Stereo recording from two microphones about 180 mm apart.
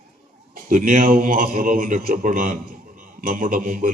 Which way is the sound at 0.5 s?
45° right (ahead or behind).